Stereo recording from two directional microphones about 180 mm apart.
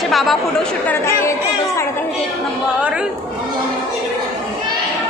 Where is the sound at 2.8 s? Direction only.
5° right (ahead or behind).